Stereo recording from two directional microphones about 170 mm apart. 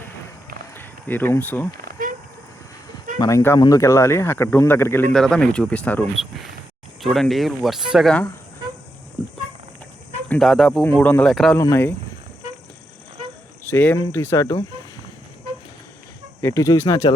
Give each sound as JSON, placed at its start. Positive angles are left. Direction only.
{"t": 0.7, "sound": "a sound", "side_deg": 10}
{"t": 1.7, "sound": "a sound", "side_deg": -55}
{"t": 3.2, "sound": "speech", "side_deg": 20}
{"t": 10.2, "sound": "speech", "side_deg": 5}
{"t": 11.5, "sound": "speech", "side_deg": 15}
{"t": 13.7, "sound": "speech", "side_deg": 10}
{"t": 16.4, "sound": "speech", "side_deg": 20}